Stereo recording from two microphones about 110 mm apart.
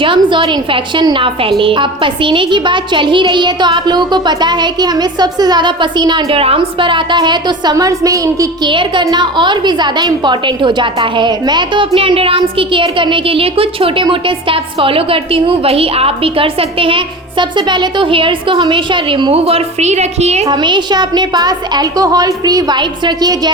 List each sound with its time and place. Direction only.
0.0 s a woman's voice: 50° right (ahead or behind)
6.2 s a woman's voice: 60° right (ahead or behind); by 8.4 s 30° right (ahead or behind)
8.6 s a woman's voice: 45° right (ahead or behind)
11.9 s a woman's voice: 55° right (ahead or behind); by 20.5 s 80° right
20.5 s a woman's voice: 45° right (ahead or behind)